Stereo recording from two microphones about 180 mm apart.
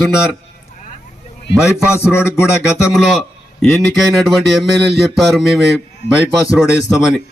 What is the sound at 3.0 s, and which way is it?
Speech, centre (ahead or behind).